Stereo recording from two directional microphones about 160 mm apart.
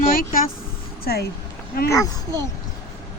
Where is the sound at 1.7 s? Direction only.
65° left (ahead or behind).